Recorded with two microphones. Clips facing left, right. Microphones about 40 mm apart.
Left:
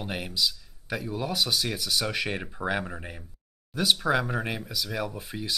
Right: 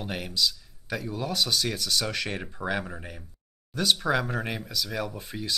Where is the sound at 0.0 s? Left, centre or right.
Centre.